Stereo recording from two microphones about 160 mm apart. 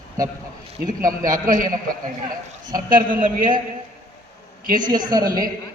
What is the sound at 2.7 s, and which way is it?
Speech, 60° right (ahead or behind).